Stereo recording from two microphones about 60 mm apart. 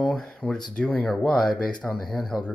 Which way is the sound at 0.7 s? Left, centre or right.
Left.